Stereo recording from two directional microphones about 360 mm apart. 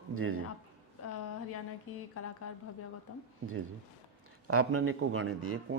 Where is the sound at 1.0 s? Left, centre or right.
Left.